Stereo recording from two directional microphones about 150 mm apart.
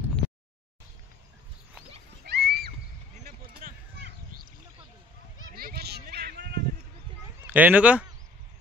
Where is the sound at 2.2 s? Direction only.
90° right.